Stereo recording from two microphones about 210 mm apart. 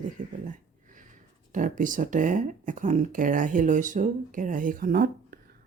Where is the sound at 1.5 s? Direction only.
40° right (ahead or behind).